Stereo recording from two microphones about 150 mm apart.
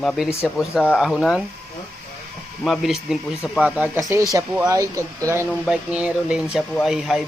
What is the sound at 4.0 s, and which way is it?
Speech, 20° right (ahead or behind).